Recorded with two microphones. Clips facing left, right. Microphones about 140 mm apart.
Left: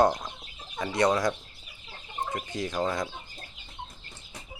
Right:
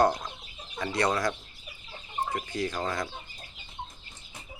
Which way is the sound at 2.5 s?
20° left (ahead or behind).